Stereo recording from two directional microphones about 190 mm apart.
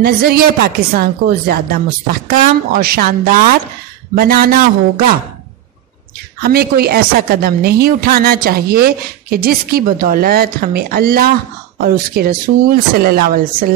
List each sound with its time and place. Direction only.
0.0 s speech: 55° right (ahead or behind)
6.4 s speech: 55° right (ahead or behind)